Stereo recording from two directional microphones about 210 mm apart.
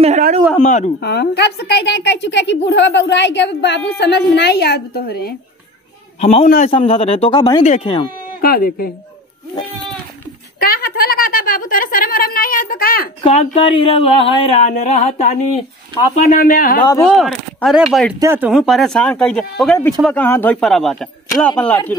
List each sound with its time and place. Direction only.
0.0 s speech: 35° right (ahead or behind)
0.6 s speech: 35° left (ahead or behind)
1.0 s a woman's voice: 50° left (ahead or behind)
6.2 s a man's voice: 30° left (ahead or behind)
7.6 s a man's voice: 30° left (ahead or behind)
8.4 s a woman's voice: 45° left (ahead or behind)
10.6 s a sound: 45° left (ahead or behind)
13.2 s a woman's voice: 30° left (ahead or behind)
16.8 s speech: 15° left (ahead or behind)
17.1 s speech: centre (ahead or behind)